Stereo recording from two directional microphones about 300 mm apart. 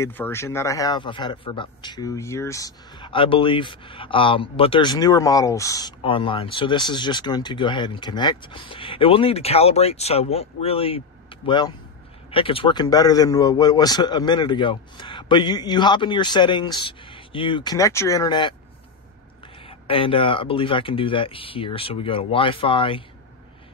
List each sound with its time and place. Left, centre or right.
0.0 s speech: centre
19.6 s speech: centre